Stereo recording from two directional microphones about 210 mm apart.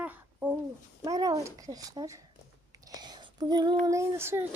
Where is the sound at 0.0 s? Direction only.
5° right (ahead or behind).